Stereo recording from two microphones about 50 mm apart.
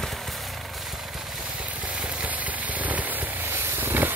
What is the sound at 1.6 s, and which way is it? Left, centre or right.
Vehicle, right.